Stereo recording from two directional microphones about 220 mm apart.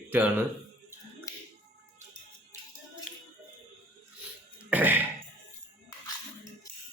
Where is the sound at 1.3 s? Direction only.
15° left (ahead or behind).